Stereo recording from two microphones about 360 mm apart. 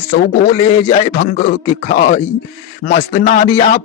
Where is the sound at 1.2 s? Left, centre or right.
Left.